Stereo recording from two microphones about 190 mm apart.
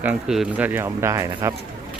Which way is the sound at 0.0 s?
5° right (ahead or behind).